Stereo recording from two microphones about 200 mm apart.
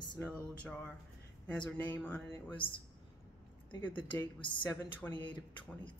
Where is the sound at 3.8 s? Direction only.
10° left (ahead or behind).